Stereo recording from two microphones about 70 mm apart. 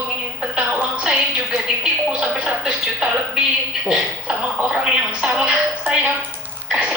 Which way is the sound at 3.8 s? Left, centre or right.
Centre.